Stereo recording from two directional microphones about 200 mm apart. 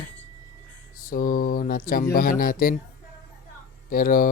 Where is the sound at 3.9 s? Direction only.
45° left (ahead or behind).